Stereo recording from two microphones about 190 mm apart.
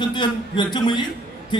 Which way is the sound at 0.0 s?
25° left (ahead or behind).